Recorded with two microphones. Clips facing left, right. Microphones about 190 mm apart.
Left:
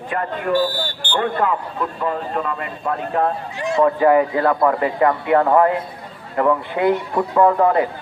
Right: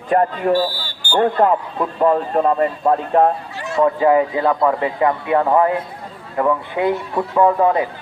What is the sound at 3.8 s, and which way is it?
Speech, 20° right (ahead or behind).